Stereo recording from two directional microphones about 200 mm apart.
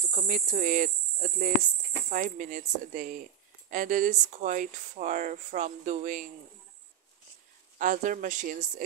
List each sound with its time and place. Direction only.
0.0 s speech: 40° right (ahead or behind)
7.8 s speech: 40° right (ahead or behind)